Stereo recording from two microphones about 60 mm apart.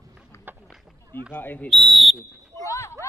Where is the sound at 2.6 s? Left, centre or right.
Left.